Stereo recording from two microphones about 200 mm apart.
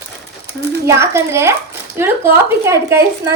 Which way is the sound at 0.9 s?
15° right (ahead or behind).